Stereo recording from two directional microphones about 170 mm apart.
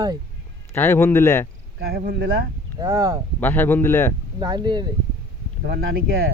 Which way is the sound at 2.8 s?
20° right (ahead or behind).